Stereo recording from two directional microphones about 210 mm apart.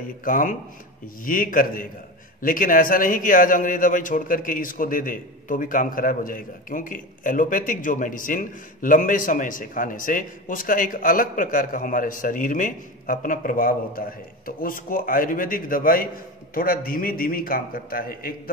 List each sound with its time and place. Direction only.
0.2 s a man's voice: 40° left (ahead or behind)